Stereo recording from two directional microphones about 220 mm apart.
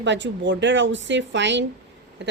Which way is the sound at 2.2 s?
50° right (ahead or behind).